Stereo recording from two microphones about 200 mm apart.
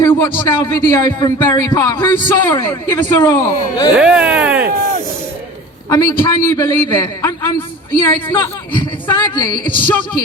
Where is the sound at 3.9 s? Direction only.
5° right (ahead or behind).